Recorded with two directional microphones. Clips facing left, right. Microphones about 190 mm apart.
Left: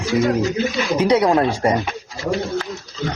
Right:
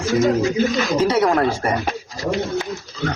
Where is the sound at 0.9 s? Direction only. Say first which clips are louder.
Left 4 dB; 15° left (ahead or behind).